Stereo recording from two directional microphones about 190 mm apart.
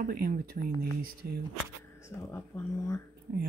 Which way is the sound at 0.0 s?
50° right (ahead or behind).